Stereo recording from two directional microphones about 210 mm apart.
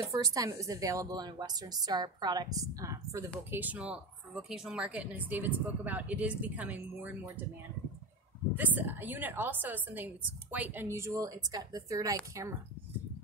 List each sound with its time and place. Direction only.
0.0 s speech: 15° right (ahead or behind)
8.5 s speech: 10° right (ahead or behind)